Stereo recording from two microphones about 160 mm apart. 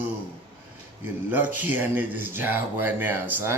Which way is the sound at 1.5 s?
10° right (ahead or behind).